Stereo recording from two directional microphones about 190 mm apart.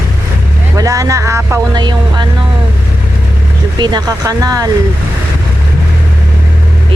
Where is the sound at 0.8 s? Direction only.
20° right (ahead or behind).